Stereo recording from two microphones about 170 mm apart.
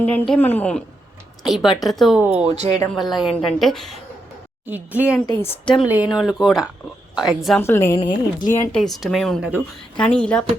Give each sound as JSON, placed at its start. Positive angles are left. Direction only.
{"t": 0.1, "sound": "a woman's voice", "side_deg": 10}
{"t": 2.5, "sound": "speech", "side_deg": -40}
{"t": 2.9, "sound": "a woman's voice", "side_deg": 0}
{"t": 4.6, "sound": "speech", "side_deg": -10}
{"t": 5.3, "sound": "a woman's voice", "side_deg": 10}
{"t": 5.9, "sound": "a woman's voice", "side_deg": -5}
{"t": 7.6, "sound": "a woman's voice", "side_deg": 15}
{"t": 7.9, "sound": "a woman's voice", "side_deg": 25}
{"t": 8.7, "sound": "a woman's voice", "side_deg": 0}